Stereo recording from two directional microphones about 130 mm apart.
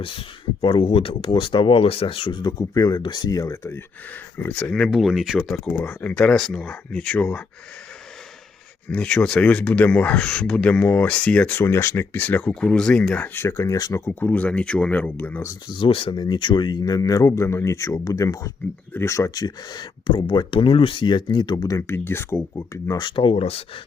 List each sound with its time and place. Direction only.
0.0 s speech: 45° left (ahead or behind); by 3.8 s 25° left (ahead or behind)
4.4 s speech: 10° left (ahead or behind)
8.9 s speech: 5° left (ahead or behind)
15.7 s speech: 40° left (ahead or behind)
21.8 s speech: 20° left (ahead or behind); by 23.6 s 50° left (ahead or behind)